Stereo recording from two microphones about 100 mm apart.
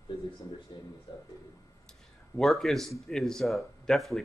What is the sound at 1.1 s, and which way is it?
Speech, 45° left (ahead or behind).